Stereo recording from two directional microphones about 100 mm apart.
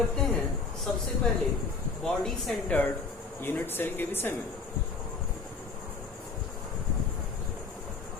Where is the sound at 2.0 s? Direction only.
5° left (ahead or behind).